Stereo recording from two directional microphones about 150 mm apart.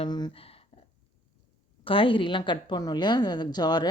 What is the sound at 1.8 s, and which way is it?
A woman's voice, 35° left (ahead or behind).